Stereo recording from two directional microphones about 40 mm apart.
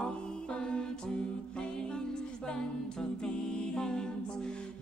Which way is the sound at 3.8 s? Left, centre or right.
Centre.